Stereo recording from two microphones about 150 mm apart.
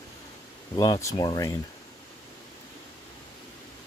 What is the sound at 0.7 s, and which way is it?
Speech, 25° left (ahead or behind).